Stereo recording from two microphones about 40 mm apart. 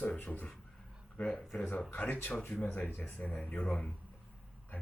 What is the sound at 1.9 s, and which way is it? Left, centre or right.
Speech, left.